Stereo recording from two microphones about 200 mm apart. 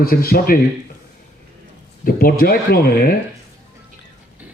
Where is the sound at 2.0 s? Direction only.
45° left (ahead or behind).